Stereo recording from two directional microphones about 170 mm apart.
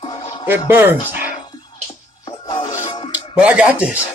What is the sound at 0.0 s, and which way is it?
Music, 25° left (ahead or behind).